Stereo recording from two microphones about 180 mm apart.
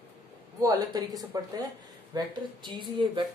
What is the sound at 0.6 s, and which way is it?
A woman's voice, 20° right (ahead or behind).